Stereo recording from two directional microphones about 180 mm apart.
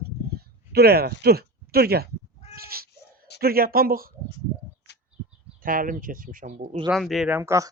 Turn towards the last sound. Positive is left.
turn(degrees=-15)  # may be behind; listen again after turning